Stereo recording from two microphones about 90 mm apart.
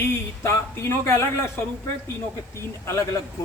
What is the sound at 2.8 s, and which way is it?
Male singing, 35° left (ahead or behind).